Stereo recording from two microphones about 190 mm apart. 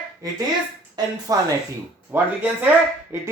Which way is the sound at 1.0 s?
20° right (ahead or behind).